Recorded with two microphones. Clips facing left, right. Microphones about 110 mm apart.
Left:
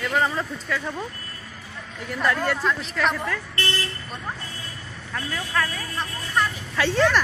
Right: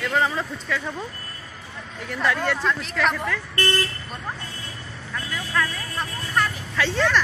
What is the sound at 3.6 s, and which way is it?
Speech, 45° right (ahead or behind).